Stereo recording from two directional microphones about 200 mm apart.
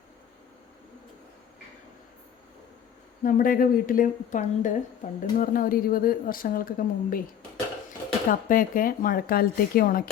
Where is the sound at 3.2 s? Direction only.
45° left (ahead or behind).